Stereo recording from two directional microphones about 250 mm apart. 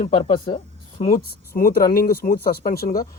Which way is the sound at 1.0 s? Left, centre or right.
Left.